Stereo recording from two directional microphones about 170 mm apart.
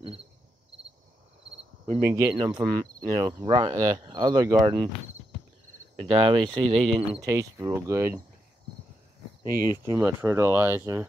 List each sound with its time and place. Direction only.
2.0 s speech: 15° right (ahead or behind)
2.3 s speech: 25° right (ahead or behind)
5.9 s speech: 30° right (ahead or behind)
6.8 s speech: centre (ahead or behind)
7.2 s speech: 20° right (ahead or behind)
9.7 s speech: 15° right (ahead or behind)